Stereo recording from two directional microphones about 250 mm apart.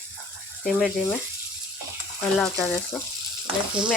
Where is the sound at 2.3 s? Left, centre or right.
Centre.